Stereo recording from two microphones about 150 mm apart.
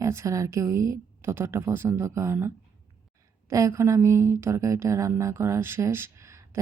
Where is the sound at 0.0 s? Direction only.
20° right (ahead or behind).